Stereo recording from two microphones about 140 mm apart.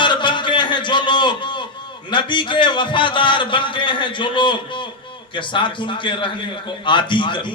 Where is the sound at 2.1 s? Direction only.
35° left (ahead or behind).